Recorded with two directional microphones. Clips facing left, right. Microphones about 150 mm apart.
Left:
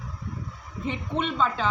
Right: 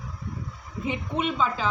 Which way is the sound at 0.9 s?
5° right (ahead or behind).